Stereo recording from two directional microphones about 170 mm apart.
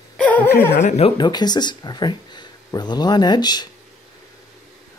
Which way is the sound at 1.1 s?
25° left (ahead or behind).